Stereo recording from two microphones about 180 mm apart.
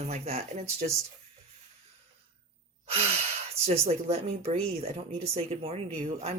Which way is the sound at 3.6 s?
35° right (ahead or behind).